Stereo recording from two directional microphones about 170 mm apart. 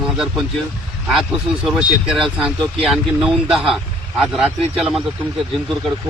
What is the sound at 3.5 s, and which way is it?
Speech, centre (ahead or behind).